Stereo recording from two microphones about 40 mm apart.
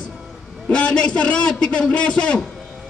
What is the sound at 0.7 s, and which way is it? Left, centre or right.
A man's voice, left.